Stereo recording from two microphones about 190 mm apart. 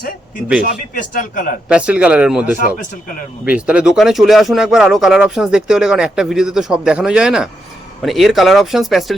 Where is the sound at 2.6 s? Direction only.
45° left (ahead or behind).